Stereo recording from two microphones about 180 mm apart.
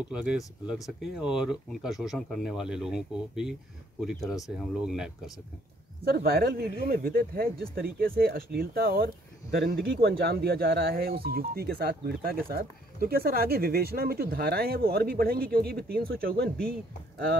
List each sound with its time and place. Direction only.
0.1 s speech: 5° right (ahead or behind)
6.0 s speech: 60° right (ahead or behind)